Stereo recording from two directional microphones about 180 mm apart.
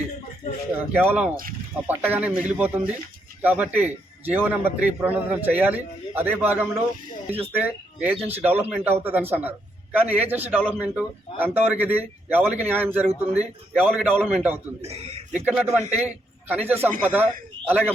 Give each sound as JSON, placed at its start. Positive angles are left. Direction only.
{"t": 0.8, "sound": "a man's voice", "side_deg": -10}
{"t": 14.8, "sound": "a man's voice", "side_deg": -35}
{"t": 15.3, "sound": "a man's voice", "side_deg": -10}